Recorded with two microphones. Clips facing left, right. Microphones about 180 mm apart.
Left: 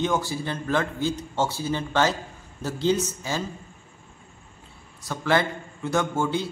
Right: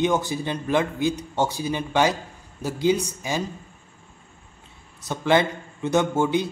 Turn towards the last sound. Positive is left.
turn(degrees=-20)  # may be behind; listen again after turning